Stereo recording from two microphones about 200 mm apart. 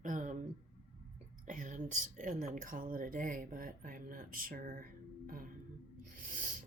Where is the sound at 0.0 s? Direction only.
40° right (ahead or behind).